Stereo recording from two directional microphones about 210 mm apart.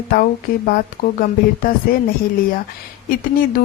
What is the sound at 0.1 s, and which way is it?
A woman's voice, 40° left (ahead or behind).